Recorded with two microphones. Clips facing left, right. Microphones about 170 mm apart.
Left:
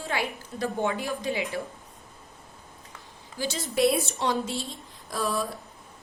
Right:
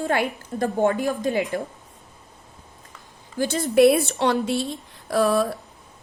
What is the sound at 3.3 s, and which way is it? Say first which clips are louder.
A woman's voice: right 9 dB; 55° right (ahead or behind).